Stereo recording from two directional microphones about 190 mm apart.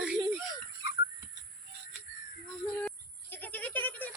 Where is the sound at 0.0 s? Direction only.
5° right (ahead or behind).